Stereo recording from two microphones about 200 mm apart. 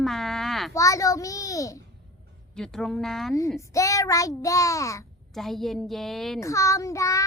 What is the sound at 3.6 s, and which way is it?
A child's voice, 15° left (ahead or behind).